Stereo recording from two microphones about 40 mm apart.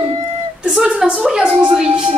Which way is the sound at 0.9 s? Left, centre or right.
Centre.